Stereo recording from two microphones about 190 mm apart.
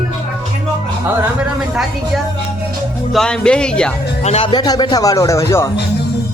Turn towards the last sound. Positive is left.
turn(degrees=15)  # may be behind; listen again after turning